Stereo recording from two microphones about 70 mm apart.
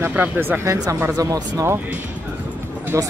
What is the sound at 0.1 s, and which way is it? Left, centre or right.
Speech, right.